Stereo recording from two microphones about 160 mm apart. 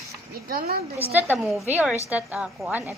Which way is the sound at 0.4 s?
70° right (ahead or behind).